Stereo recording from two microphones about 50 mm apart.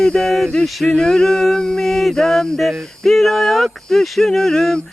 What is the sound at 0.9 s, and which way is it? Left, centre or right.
Mantra, centre.